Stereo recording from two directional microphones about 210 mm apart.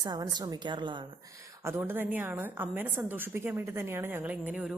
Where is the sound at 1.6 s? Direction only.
10° right (ahead or behind).